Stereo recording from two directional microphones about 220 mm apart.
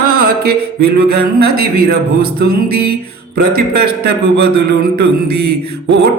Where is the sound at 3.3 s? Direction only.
45° right (ahead or behind).